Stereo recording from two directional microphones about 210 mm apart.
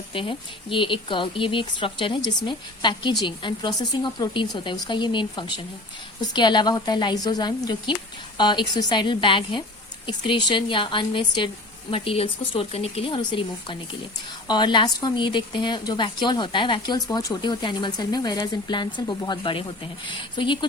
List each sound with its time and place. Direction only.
0.1 s a woman's voice: 25° left (ahead or behind)